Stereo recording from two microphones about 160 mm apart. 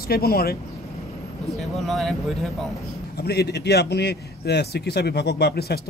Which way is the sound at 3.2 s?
90° left.